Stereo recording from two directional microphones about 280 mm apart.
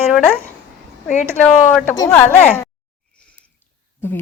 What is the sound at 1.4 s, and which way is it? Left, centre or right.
Speech, centre.